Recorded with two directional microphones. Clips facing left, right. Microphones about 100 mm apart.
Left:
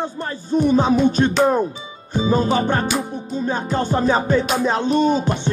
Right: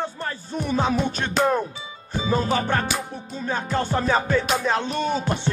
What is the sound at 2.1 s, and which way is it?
Music, 25° left (ahead or behind).